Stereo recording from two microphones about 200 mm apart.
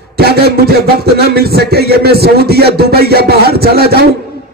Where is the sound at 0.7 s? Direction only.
50° right (ahead or behind).